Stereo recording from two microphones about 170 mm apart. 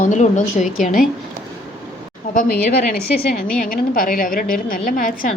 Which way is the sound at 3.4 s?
55° left (ahead or behind).